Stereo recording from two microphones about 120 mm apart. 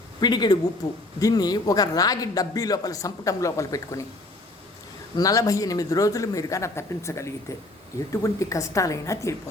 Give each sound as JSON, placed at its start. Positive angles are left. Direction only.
{"t": 0.2, "sound": "a man's voice", "side_deg": 35}
{"t": 5.1, "sound": "speech", "side_deg": 30}